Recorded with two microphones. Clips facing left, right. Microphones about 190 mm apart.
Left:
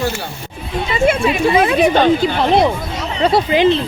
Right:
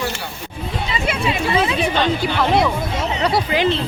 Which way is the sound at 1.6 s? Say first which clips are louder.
Left 6 dB; 55° left (ahead or behind).